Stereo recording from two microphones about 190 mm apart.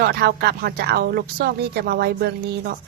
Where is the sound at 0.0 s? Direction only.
55° right (ahead or behind).